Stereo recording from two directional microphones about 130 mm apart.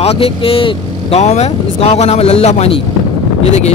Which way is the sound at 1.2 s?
60° left (ahead or behind).